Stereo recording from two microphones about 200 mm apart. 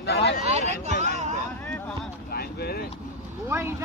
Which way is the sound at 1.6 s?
5° left (ahead or behind).